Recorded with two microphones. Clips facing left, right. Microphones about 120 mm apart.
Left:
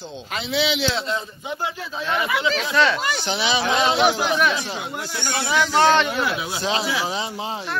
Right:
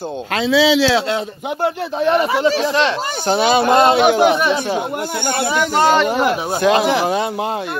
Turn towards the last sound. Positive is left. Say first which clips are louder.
# right 7 dB
turn(degrees=-55)  # may be behind; listen again after turning